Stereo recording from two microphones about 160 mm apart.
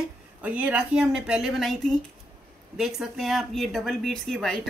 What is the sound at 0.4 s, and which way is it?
Speech, 10° right (ahead or behind).